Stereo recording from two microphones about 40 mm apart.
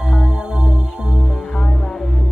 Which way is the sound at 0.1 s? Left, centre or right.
Right.